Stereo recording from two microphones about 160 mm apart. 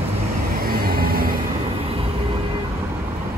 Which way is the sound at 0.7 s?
70° right (ahead or behind).